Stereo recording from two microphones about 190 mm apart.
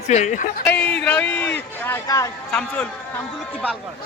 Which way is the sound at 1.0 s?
10° left (ahead or behind).